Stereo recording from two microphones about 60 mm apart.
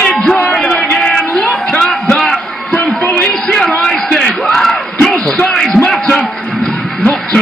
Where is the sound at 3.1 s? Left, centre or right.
Centre.